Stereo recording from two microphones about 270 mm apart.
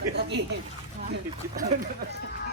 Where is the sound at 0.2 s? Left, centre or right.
Right.